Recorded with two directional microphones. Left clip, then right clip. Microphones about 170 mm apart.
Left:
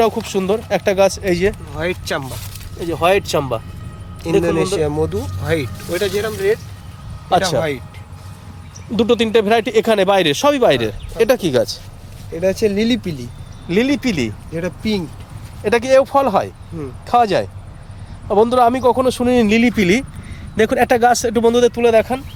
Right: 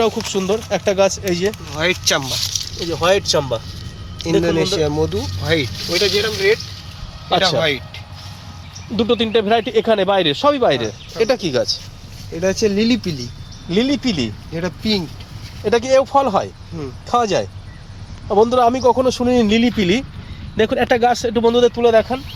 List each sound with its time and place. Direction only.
0.3 s speech: 10° left (ahead or behind)
1.7 s speech: 10° right (ahead or behind)
2.8 s speech: 10° left (ahead or behind)
4.2 s speech: 5° right (ahead or behind)
9.0 s speech: 20° left (ahead or behind)
12.3 s speech: 30° right (ahead or behind)
13.7 s speech: 10° left (ahead or behind)
14.5 s speech: 20° right (ahead or behind)
15.6 s speech: 10° left (ahead or behind)